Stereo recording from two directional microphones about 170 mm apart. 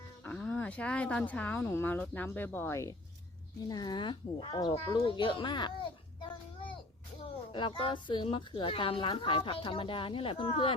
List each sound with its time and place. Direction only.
0.3 s a woman's voice: 10° left (ahead or behind); by 5.7 s 25° left (ahead or behind)
7.5 s speech: 30° left (ahead or behind)